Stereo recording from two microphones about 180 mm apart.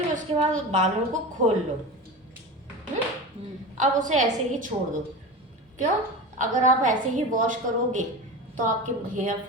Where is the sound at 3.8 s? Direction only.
45° right (ahead or behind).